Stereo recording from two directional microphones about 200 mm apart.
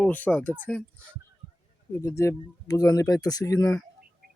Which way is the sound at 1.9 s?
15° left (ahead or behind).